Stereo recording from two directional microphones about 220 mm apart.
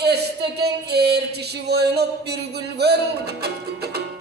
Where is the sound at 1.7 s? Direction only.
50° right (ahead or behind).